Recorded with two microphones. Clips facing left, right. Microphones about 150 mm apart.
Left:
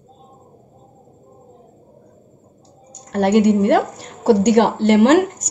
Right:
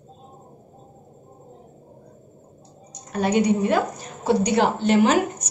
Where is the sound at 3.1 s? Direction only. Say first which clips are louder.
Left 6 dB; 75° left (ahead or behind).